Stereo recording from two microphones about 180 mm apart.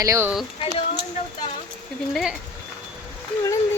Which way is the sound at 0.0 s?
15° right (ahead or behind).